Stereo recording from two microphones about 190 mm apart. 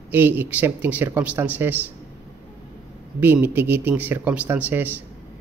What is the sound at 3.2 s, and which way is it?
A man's voice, 10° right (ahead or behind).